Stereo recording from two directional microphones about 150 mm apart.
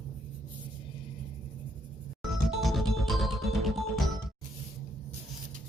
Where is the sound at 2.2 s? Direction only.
Centre (ahead or behind).